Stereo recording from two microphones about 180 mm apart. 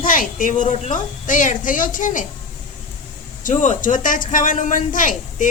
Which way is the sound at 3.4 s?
45° left (ahead or behind).